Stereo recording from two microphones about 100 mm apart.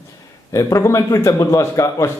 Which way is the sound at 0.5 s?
30° left (ahead or behind).